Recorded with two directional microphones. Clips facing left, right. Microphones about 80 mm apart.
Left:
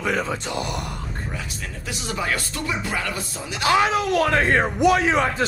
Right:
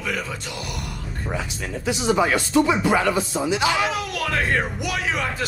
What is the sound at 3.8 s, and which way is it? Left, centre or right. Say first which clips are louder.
Speech: left 5 dB; left.